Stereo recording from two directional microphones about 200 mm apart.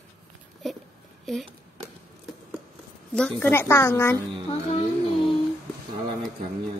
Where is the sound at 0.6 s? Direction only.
Centre (ahead or behind).